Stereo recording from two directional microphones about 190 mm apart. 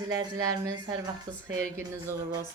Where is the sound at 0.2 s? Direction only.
20° right (ahead or behind).